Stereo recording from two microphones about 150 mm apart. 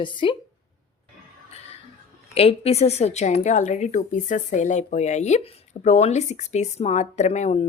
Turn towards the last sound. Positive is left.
turn(degrees=50)  # may be behind; listen again after turning